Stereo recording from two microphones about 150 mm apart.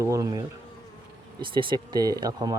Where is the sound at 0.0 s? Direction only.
20° right (ahead or behind).